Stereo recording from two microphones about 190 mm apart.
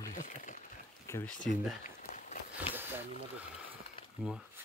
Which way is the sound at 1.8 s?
40° left (ahead or behind).